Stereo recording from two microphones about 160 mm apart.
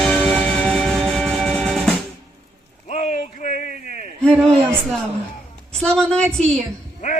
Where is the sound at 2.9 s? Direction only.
50° left (ahead or behind).